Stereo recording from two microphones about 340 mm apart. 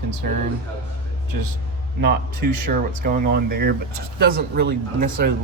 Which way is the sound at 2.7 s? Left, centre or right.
Right.